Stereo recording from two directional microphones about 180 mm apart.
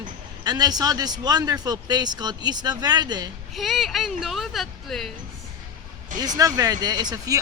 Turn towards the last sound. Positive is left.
turn(degrees=-20)  # may be behind; listen again after turning